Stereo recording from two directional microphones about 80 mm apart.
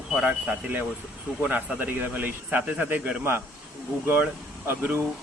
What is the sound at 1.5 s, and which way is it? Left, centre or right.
Speech, right.